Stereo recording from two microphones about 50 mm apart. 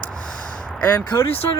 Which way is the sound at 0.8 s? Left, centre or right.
Left.